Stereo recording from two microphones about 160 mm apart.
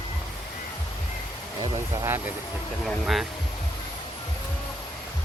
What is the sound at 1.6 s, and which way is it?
Speech, 25° right (ahead or behind).